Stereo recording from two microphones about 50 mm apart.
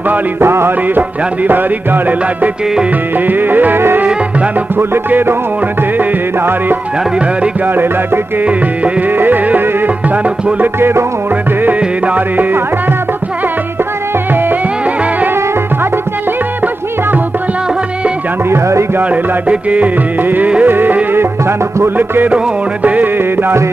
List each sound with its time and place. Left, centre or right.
0.4 s music: right
0.9 s music: right
5.9 s music: right
9.2 s music: right
10.8 s music: right
11.6 s music: right
18.5 s speech: right
19.0 s music: right